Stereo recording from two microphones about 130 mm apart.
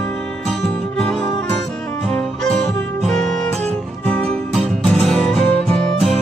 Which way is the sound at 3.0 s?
5° left (ahead or behind).